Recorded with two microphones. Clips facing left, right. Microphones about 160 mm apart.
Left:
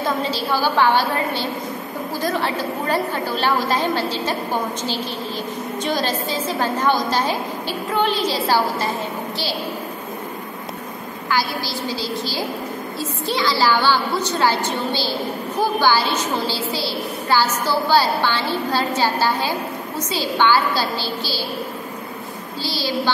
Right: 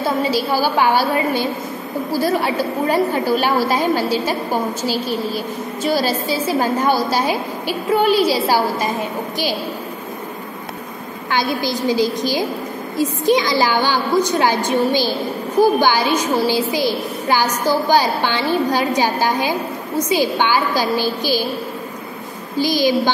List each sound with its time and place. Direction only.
0.0 s a woman's voice: 10° right (ahead or behind)
11.3 s a woman's voice: 20° right (ahead or behind)
22.6 s a woman's voice: 15° right (ahead or behind)